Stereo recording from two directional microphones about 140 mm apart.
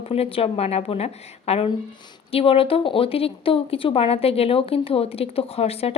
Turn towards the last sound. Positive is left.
turn(degrees=45)  # may be behind; listen again after turning